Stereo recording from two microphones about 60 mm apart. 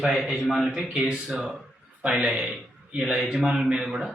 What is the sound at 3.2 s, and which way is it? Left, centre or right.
Speech, centre.